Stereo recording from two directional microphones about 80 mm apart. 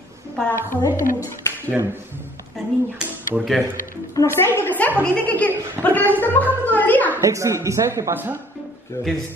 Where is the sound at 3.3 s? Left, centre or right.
Centre.